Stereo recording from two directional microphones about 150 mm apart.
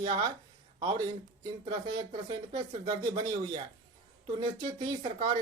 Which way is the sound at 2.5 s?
30° right (ahead or behind).